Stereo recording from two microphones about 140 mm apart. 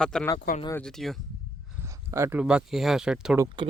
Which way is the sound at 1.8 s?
20° right (ahead or behind).